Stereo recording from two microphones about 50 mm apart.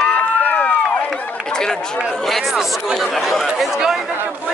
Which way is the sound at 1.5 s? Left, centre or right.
Centre.